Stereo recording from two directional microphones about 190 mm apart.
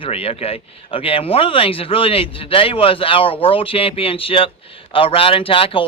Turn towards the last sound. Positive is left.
turn(degrees=30)  # may be behind; listen again after turning